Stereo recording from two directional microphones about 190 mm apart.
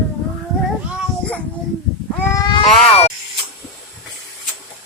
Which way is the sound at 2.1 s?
15° left (ahead or behind).